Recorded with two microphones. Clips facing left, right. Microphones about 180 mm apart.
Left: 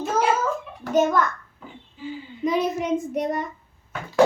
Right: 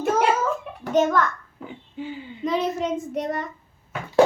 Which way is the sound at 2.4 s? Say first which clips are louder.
Left 1 dB; 15° left (ahead or behind).